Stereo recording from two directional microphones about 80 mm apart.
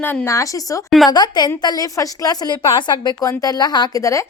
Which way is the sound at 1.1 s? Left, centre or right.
Left.